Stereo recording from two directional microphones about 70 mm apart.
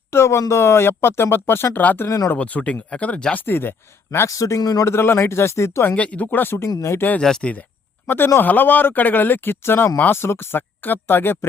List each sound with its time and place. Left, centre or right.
0.1 s speech: left
2.0 s a man's voice: left
2.3 s speech: left
3.3 s speech: left
4.3 s a man's voice: left
4.6 s speech: left
4.9 s speech: left
6.0 s speech: left
7.2 s speech: centre
8.0 s speech: left